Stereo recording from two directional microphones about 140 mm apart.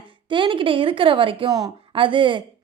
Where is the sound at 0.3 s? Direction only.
35° right (ahead or behind).